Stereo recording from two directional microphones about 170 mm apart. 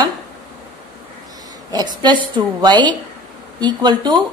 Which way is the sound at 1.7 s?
25° right (ahead or behind).